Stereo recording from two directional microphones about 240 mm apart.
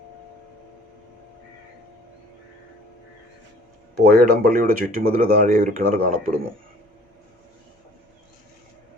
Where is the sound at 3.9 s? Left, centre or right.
Right.